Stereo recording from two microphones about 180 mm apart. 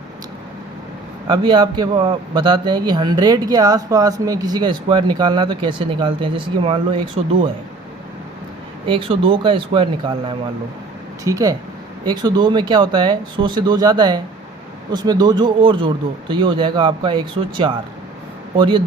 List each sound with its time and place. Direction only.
1.3 s a man's voice: 25° right (ahead or behind)
8.9 s a man's voice: 30° right (ahead or behind)